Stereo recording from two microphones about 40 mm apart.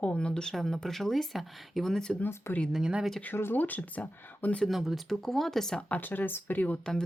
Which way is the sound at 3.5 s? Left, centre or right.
Left.